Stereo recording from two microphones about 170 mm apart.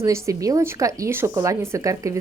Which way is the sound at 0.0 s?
20° right (ahead or behind).